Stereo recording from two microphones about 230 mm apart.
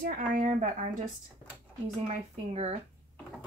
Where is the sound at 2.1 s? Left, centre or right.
Right.